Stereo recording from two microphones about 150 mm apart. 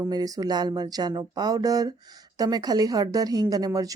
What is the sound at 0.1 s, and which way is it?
A woman's voice, 25° right (ahead or behind).